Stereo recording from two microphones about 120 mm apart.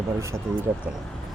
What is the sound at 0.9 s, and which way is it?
Speech, 10° right (ahead or behind).